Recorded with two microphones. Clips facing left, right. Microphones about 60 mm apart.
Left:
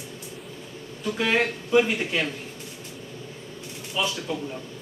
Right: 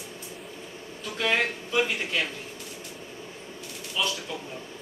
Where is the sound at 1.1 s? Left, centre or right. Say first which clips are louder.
Left 2 dB; centre.